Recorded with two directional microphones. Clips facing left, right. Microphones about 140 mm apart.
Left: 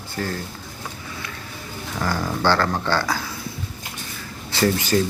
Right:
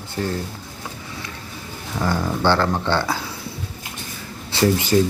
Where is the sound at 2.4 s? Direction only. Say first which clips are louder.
Right 1 dB; 20° right (ahead or behind).